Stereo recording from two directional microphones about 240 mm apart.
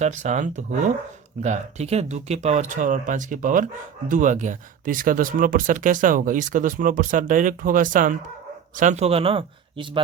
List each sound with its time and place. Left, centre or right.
0.0 s speech: right